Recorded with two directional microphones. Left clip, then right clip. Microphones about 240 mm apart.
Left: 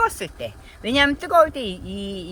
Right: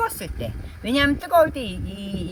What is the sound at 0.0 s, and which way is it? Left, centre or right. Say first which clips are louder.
Speech: left 4 dB; centre.